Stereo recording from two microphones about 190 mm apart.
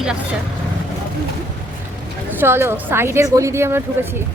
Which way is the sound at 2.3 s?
10° right (ahead or behind).